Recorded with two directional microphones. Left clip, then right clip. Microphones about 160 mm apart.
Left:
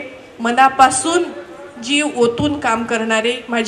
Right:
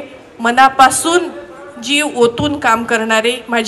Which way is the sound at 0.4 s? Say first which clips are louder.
Right 3 dB; 25° right (ahead or behind).